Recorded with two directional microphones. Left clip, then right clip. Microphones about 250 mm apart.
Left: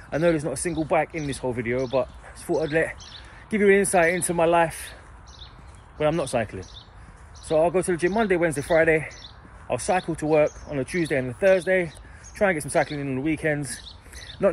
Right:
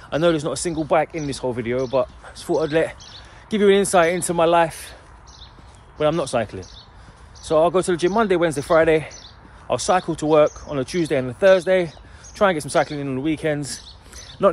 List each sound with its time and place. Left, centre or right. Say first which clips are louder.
0.1 s speech: right 3 dB; centre
5.9 s speech: right 3 dB; centre